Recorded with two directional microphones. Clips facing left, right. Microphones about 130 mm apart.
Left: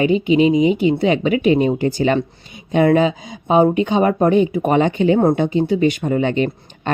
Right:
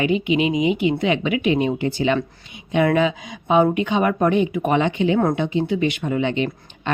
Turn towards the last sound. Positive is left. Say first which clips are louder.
# left 4 dB
turn(degrees=45)  # may be behind; listen again after turning